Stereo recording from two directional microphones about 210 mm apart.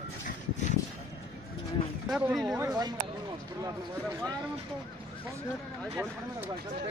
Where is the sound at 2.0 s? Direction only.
Centre (ahead or behind).